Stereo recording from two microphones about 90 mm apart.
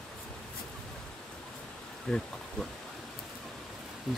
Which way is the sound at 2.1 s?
5° left (ahead or behind).